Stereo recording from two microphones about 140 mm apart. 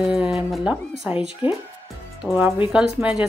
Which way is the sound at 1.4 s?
40° left (ahead or behind).